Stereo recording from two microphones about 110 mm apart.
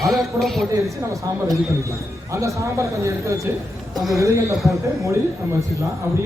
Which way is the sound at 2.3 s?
30° right (ahead or behind).